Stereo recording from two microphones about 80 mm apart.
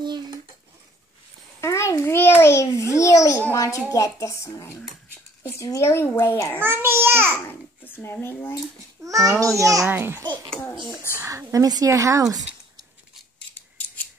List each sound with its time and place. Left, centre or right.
1.6 s a sound: left
3.5 s a child's voice: left
6.6 s a child's voice: right
7.4 s speech: left
9.0 s speech: right
9.8 s a child's voice: right
11.2 s speech: right